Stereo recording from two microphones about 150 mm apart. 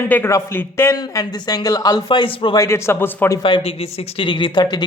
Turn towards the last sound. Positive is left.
turn(degrees=35)  # may be behind; listen again after turning